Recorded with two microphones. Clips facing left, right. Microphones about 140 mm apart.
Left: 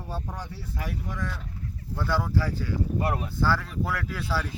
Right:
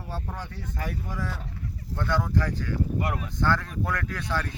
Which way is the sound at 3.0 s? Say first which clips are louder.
Left 2 dB; 30° left (ahead or behind).